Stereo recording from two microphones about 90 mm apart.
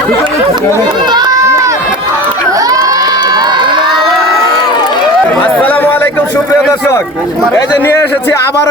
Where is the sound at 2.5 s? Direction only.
40° right (ahead or behind); by 4.1 s 60° right (ahead or behind).